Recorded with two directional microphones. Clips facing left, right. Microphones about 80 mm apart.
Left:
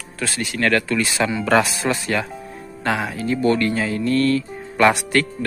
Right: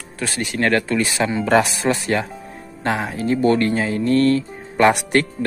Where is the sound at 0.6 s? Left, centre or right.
Right.